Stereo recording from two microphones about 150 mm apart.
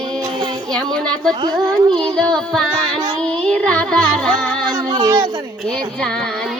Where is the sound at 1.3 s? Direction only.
30° right (ahead or behind).